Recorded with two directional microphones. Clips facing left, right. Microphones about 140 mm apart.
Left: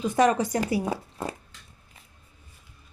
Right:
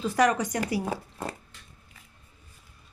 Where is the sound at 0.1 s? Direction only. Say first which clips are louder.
Left 2 dB; 25° left (ahead or behind).